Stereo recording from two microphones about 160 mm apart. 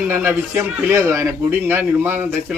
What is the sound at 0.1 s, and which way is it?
A man's voice, 15° right (ahead or behind).